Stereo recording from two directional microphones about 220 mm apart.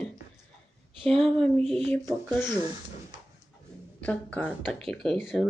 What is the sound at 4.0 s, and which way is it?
Speech, 5° left (ahead or behind).